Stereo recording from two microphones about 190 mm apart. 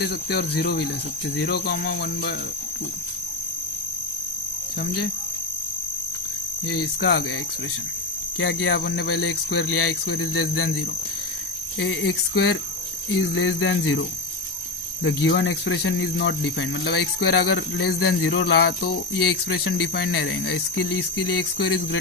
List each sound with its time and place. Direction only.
0.0 s speech: 60° left (ahead or behind)
6.7 s speech: 60° left (ahead or behind)
8.4 s speech: 70° left (ahead or behind); by 9.9 s 90° left
11.8 s speech: 75° left (ahead or behind)
13.2 s speech: 85° left
15.0 s speech: 70° left (ahead or behind)